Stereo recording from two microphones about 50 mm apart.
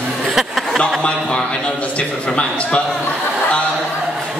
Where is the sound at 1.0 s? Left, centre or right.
Centre.